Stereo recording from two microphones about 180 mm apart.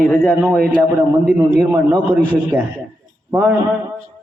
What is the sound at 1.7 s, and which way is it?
Speech, 15° right (ahead or behind).